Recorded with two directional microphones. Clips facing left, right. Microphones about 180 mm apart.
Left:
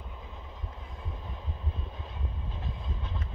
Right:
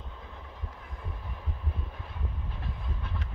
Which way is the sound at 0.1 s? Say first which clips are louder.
Even; 15° left (ahead or behind).